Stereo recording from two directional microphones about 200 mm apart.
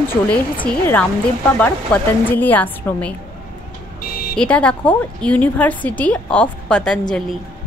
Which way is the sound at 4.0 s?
50° left (ahead or behind).